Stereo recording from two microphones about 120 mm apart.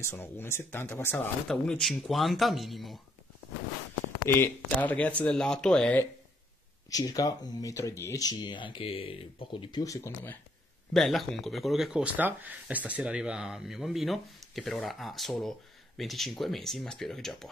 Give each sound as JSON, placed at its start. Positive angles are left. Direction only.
{"t": 0.0, "sound": "speech", "side_deg": 20}
{"t": 1.5, "sound": "speech", "side_deg": 5}
{"t": 4.4, "sound": "speech", "side_deg": 15}
{"t": 6.9, "sound": "speech", "side_deg": 30}
{"t": 9.8, "sound": "speech", "side_deg": 30}
{"t": 10.9, "sound": "speech", "side_deg": 0}